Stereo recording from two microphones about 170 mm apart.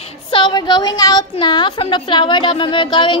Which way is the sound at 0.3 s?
25° left (ahead or behind).